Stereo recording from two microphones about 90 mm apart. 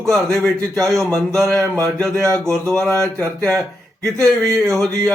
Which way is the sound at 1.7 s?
35° right (ahead or behind).